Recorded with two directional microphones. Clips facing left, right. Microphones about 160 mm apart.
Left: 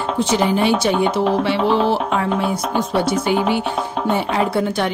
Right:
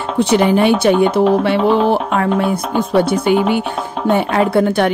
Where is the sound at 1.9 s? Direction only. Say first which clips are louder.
Right 3 dB; 60° right (ahead or behind).